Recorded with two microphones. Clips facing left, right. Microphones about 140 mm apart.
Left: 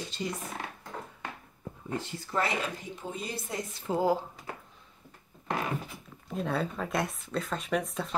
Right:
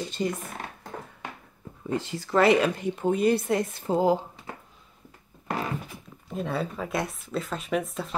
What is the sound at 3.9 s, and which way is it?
Speech, 20° right (ahead or behind).